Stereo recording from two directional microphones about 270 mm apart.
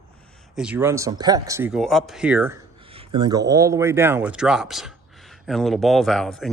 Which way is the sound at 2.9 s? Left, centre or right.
Centre.